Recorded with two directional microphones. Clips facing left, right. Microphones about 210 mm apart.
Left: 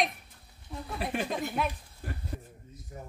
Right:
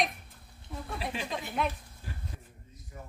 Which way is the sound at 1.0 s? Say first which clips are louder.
Left 5 dB; 55° left (ahead or behind).